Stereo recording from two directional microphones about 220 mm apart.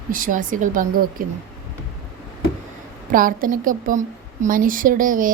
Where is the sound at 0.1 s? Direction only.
40° right (ahead or behind).